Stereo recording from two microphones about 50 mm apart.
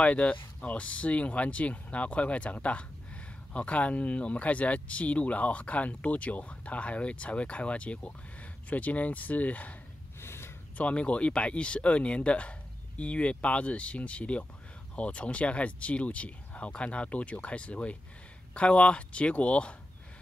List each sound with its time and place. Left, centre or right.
0.0 s speech: left
10.2 s a sound: left
10.8 s speech: left